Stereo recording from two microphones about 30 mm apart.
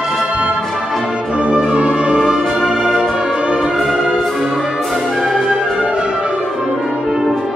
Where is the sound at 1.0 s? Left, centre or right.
Right.